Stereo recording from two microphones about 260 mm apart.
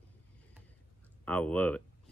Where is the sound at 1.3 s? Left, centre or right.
Centre.